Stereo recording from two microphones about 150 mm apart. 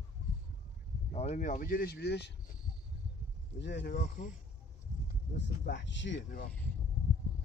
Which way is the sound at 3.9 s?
55° left (ahead or behind).